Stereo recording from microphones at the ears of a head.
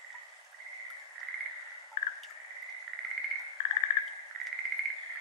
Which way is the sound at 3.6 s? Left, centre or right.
Left.